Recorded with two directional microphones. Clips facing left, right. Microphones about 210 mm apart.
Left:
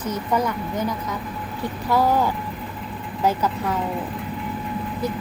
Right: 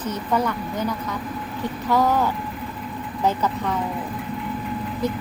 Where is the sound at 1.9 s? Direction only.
10° left (ahead or behind).